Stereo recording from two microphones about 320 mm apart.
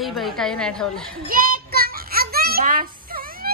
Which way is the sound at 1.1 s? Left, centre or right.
Right.